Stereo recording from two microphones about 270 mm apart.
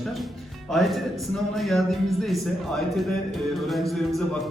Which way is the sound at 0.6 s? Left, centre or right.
Centre.